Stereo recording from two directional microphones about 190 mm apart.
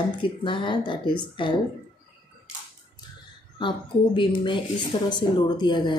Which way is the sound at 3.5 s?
25° left (ahead or behind).